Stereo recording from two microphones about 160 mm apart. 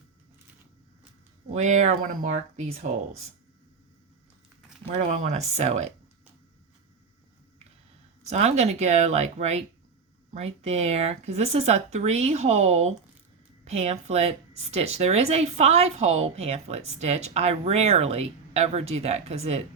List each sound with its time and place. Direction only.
1.5 s speech: 45° right (ahead or behind)
4.9 s speech: 45° right (ahead or behind)
8.3 s a woman's voice: 45° right (ahead or behind)